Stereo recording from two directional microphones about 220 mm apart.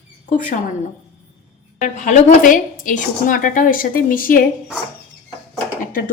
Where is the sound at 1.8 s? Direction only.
35° left (ahead or behind).